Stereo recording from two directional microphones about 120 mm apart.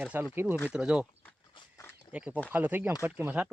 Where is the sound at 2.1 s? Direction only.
10° right (ahead or behind).